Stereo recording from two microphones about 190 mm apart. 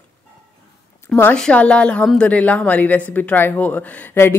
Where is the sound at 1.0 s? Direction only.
10° left (ahead or behind).